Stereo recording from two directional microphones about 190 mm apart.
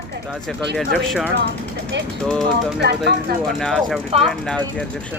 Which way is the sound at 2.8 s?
60° right (ahead or behind).